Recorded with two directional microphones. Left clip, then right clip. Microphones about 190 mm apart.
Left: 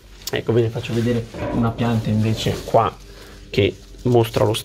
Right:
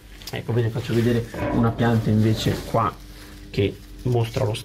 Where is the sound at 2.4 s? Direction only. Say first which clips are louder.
Left 5 dB; 45° left (ahead or behind).